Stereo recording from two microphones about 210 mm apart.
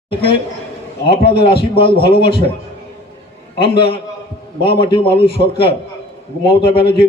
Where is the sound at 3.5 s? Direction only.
25° left (ahead or behind).